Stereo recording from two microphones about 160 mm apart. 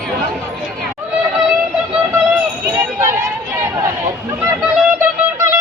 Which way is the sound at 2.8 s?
15° right (ahead or behind).